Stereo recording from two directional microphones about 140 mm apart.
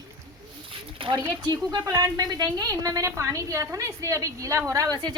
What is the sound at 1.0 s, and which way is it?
A woman's voice, 40° right (ahead or behind).